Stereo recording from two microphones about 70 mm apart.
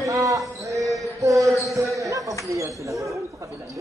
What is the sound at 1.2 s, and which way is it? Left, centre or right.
Basketball bounce, right.